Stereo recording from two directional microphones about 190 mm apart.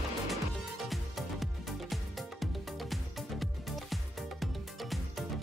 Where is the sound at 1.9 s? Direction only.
Centre (ahead or behind).